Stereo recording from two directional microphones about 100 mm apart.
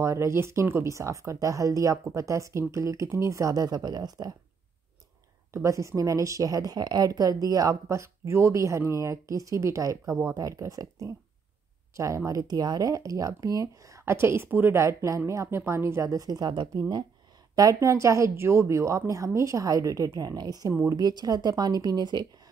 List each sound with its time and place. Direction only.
0.0 s a woman's voice: 30° right (ahead or behind)
5.5 s a woman's voice: 30° right (ahead or behind); by 16.8 s 50° right (ahead or behind)
17.6 s a woman's voice: 35° right (ahead or behind)